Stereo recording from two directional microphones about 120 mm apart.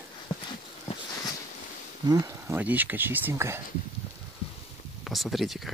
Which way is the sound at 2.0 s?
30° right (ahead or behind).